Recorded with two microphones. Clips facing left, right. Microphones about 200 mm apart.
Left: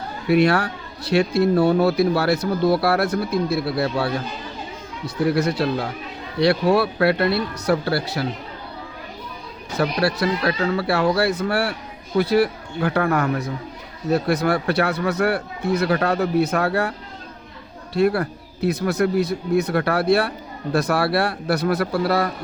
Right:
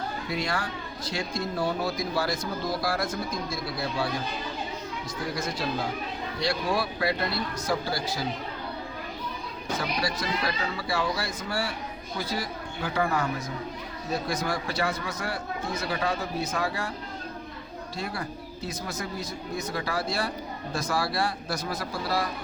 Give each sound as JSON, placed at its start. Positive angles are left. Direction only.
{"t": 0.3, "sound": "speech", "side_deg": 65}
{"t": 9.7, "sound": "speech", "side_deg": 65}
{"t": 17.9, "sound": "speech", "side_deg": 65}